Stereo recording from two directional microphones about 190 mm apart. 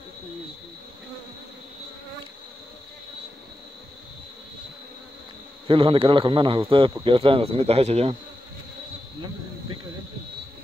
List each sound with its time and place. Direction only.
5.7 s speech: 30° right (ahead or behind)